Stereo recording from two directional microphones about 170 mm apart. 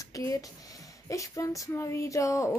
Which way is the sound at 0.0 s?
20° left (ahead or behind).